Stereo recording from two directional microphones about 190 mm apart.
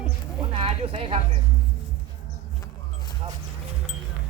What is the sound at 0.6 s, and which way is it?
Speech, 30° right (ahead or behind).